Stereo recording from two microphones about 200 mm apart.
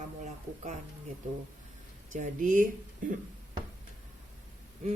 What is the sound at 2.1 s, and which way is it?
Speech, 40° right (ahead or behind).